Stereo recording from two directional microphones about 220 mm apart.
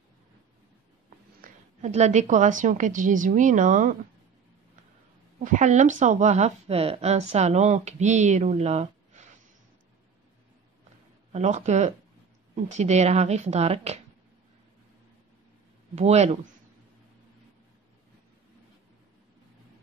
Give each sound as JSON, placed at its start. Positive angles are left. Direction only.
{"t": 1.4, "sound": "speech", "side_deg": -30}
{"t": 5.4, "sound": "speech", "side_deg": -35}
{"t": 11.3, "sound": "a woman's voice", "side_deg": -30}
{"t": 15.9, "sound": "a woman's voice", "side_deg": -30}